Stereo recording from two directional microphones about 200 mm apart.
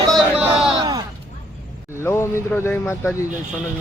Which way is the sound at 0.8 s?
20° right (ahead or behind).